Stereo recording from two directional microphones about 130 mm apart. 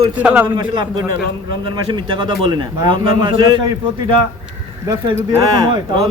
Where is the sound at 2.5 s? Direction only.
40° right (ahead or behind).